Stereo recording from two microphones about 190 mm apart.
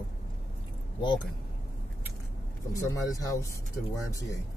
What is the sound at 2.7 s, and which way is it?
Speech, 15° left (ahead or behind).